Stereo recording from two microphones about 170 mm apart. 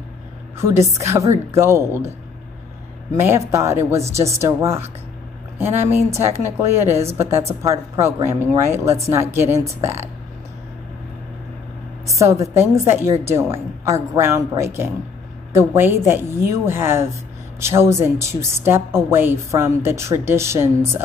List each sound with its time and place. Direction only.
0.6 s a woman's voice: 15° right (ahead or behind)
3.2 s a woman's voice: 15° right (ahead or behind)
12.2 s a woman's voice: 20° right (ahead or behind)